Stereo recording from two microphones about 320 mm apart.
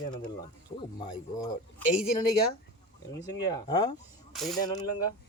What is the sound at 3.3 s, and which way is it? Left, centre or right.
Speech, centre.